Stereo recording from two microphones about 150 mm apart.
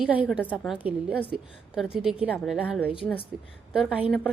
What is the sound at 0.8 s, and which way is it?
A woman's voice, 10° right (ahead or behind).